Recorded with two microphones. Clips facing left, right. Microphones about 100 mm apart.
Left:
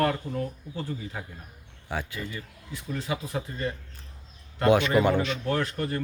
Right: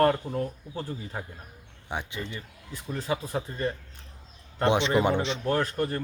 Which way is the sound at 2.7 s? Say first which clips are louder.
Right 1 dB; 35° right (ahead or behind).